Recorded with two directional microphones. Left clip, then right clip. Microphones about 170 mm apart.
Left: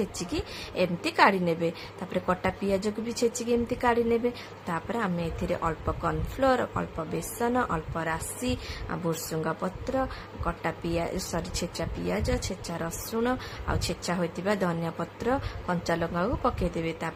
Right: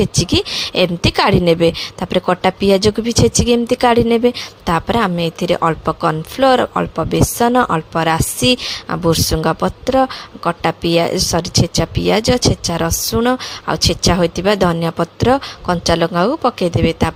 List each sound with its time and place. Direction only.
0.0 s a woman's voice: 50° right (ahead or behind)